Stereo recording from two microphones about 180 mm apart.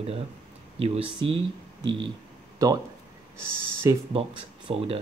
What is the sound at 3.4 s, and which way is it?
Speech, 15° right (ahead or behind).